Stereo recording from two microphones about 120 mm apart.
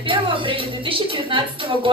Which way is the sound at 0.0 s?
45° right (ahead or behind).